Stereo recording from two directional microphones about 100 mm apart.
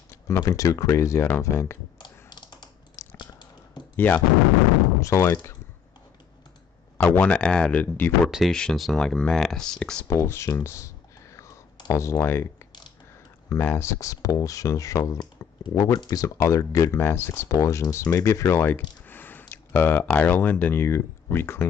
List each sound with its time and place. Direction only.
0.4 s speech: 35° left (ahead or behind)
2.0 s typing: 50° left (ahead or behind)
3.0 s a sound: 30° left (ahead or behind)
3.9 s speech: 20° left (ahead or behind)
7.2 s speech: 10° left (ahead or behind)
8.3 s speech: centre (ahead or behind)
10.0 s speech: 25° left (ahead or behind)
11.3 s clicking: 30° left (ahead or behind)
13.5 s speech: 25° left (ahead or behind)